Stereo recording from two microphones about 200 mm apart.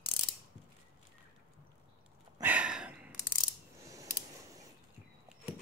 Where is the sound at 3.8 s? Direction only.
15° right (ahead or behind).